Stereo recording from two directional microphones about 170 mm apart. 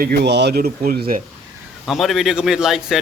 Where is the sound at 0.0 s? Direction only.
70° right (ahead or behind).